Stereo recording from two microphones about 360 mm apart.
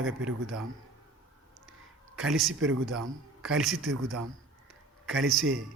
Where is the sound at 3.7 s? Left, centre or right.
Right.